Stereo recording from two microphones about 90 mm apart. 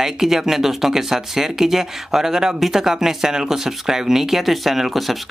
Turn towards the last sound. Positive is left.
turn(degrees=0)  # may be behind; listen again after turning